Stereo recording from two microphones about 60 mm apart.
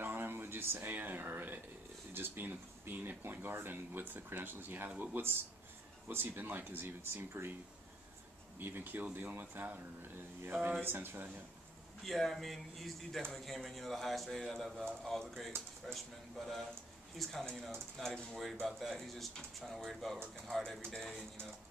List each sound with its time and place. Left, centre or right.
0.0 s a sound: right
2.1 s speech: right
8.5 s speech: right
10.8 s speech: right
12.0 s a man's voice: centre